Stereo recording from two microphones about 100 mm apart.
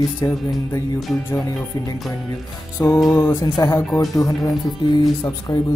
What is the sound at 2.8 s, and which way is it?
Music, 30° left (ahead or behind).